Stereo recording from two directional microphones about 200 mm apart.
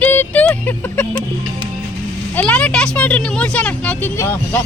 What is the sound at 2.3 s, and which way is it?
Vehicle, 5° left (ahead or behind).